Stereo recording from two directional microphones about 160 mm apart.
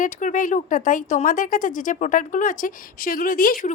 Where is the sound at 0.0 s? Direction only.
55° left (ahead or behind).